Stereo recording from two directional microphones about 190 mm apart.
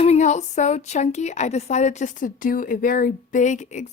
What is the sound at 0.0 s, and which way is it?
A woman's voice, 35° left (ahead or behind).